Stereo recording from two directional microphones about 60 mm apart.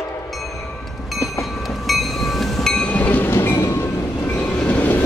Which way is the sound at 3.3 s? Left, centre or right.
Left.